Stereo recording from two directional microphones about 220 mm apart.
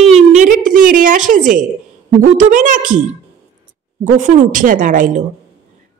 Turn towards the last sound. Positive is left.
turn(degrees=-35)  # may be behind; listen again after turning